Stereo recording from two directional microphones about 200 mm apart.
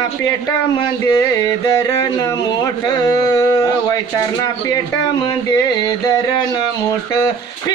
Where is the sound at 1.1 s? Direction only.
15° left (ahead or behind).